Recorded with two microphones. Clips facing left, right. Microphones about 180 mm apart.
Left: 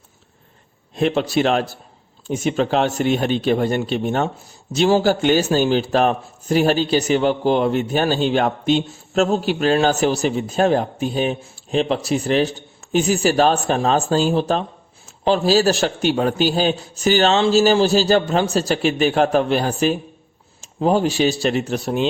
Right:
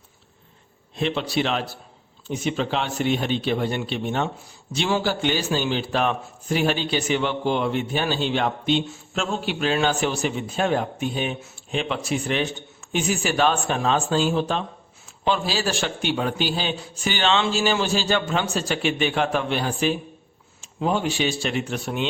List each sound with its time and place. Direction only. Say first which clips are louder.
0.9 s a man's voice: left 6 dB; 45° left (ahead or behind)